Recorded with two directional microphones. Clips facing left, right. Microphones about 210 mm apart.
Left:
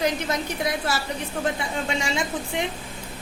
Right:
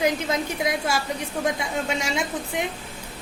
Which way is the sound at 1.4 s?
5° right (ahead or behind).